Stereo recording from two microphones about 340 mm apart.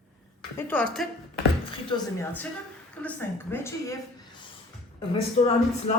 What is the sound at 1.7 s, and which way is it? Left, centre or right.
Speech, centre.